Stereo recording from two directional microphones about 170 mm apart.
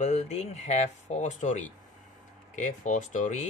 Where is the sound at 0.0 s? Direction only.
40° left (ahead or behind).